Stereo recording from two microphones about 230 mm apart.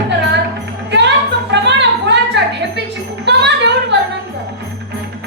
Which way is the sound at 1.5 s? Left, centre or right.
Right.